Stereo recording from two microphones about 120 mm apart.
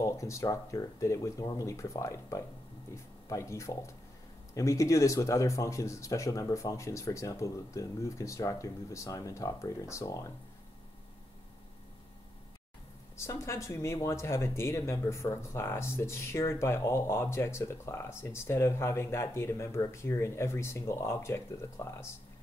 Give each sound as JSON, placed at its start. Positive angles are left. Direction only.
{"t": 0.0, "sound": "speech", "side_deg": 25}
{"t": 13.2, "sound": "speech", "side_deg": 25}